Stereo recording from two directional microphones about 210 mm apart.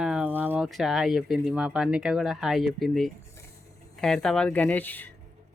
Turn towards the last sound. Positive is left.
turn(degrees=10)  # may be behind; listen again after turning